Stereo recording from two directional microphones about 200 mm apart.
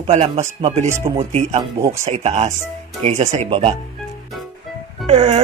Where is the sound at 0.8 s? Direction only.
15° right (ahead or behind).